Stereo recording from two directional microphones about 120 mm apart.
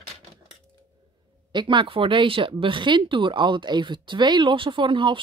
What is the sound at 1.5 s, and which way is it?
Speech, 40° right (ahead or behind).